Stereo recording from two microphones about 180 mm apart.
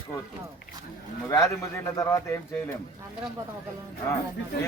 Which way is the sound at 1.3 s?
15° left (ahead or behind).